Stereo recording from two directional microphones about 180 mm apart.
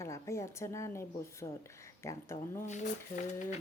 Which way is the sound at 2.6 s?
40° left (ahead or behind).